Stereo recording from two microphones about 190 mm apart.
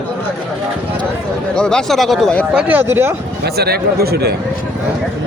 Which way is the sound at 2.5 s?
10° right (ahead or behind).